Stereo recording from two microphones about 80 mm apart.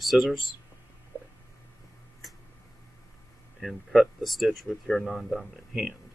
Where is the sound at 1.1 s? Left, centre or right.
Right.